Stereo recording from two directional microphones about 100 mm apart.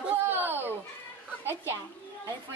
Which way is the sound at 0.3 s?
20° right (ahead or behind).